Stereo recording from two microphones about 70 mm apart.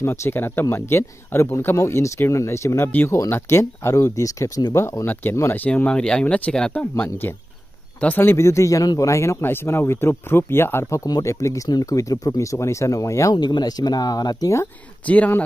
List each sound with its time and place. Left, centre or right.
0.0 s speech: left
3.9 s speech: left
4.7 s speech: left
5.0 s speech: left
5.9 s speech: centre; by 8.5 s left
8.5 s speech: left
9.0 s speech: left
9.4 s speech: left
11.2 s speech: left
13.3 s speech: left
15.0 s speech: left